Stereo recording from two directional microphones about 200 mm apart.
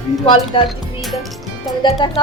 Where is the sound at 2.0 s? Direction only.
25° left (ahead or behind).